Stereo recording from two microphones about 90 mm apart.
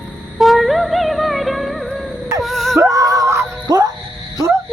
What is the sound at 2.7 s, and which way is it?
Music, 35° right (ahead or behind).